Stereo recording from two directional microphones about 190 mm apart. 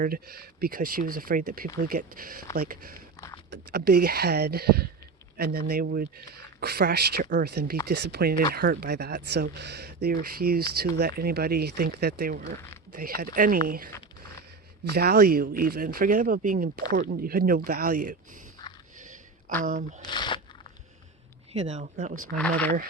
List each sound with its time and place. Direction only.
0.0 s speech: 50° right (ahead or behind)
3.2 s a sound: 20° left (ahead or behind)
3.5 s speech: 55° right (ahead or behind)
18.6 s a sound: 20° left (ahead or behind)
19.6 s speech: 45° right (ahead or behind)
20.1 s speech: 25° left (ahead or behind)
21.5 s speech: 35° right (ahead or behind)
22.4 s speech: 5° left (ahead or behind)